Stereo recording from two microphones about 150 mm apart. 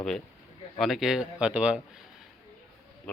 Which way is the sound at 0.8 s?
Centre (ahead or behind).